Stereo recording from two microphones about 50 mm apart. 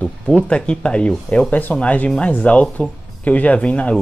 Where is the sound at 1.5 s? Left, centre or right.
Left.